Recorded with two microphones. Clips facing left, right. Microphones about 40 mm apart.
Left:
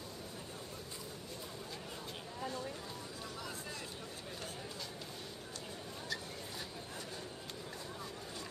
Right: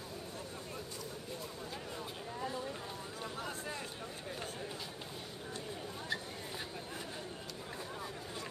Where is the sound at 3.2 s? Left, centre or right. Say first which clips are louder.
Right 6 dB; right.